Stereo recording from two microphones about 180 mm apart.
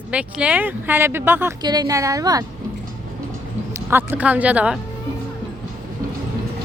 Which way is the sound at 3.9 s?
10° right (ahead or behind).